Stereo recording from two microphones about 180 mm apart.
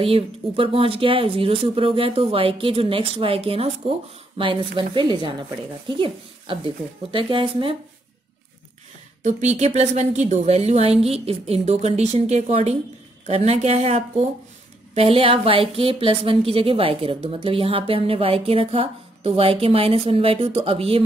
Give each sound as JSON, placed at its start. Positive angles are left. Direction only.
{"t": 0.0, "sound": "a woman's voice", "side_deg": -30}
{"t": 9.2, "sound": "a woman's voice", "side_deg": -40}